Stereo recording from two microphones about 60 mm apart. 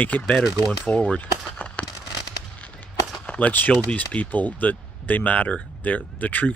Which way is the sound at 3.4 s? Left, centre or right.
Left.